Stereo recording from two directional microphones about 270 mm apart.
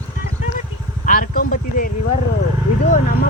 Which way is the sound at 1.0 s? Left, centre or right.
Left.